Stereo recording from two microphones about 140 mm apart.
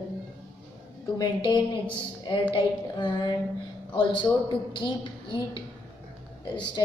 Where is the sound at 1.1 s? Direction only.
30° left (ahead or behind).